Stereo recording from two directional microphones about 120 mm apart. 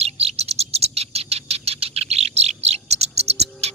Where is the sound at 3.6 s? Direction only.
60° right (ahead or behind).